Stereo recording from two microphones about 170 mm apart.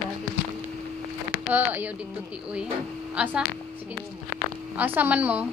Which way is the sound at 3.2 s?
5° right (ahead or behind).